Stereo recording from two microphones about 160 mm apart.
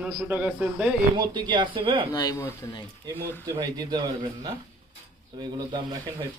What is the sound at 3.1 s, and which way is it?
A man's voice, 25° right (ahead or behind).